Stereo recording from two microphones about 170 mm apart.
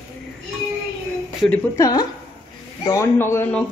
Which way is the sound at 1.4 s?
10° left (ahead or behind).